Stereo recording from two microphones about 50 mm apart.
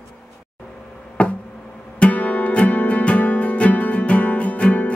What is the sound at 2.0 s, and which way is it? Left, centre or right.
Music, left.